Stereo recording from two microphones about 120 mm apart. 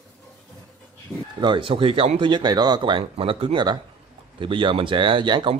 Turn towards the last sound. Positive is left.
turn(degrees=-40)  # may be behind; listen again after turning